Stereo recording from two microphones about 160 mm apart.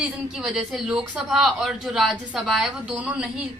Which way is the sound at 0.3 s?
5° right (ahead or behind).